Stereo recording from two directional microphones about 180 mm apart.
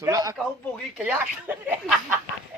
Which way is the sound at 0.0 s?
20° right (ahead or behind).